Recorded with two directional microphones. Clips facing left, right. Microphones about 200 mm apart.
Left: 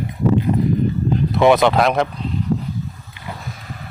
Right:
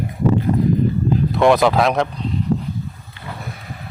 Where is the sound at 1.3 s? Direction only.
Centre (ahead or behind).